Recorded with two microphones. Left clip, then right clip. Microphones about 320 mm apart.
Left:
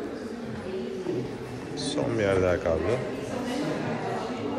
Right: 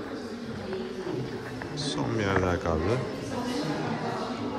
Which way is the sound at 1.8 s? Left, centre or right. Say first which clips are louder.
Left 4 dB; centre.